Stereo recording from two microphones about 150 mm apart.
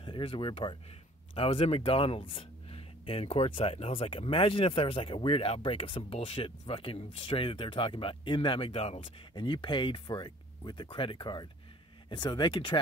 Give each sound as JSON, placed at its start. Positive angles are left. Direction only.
{"t": 0.0, "sound": "speech", "side_deg": 35}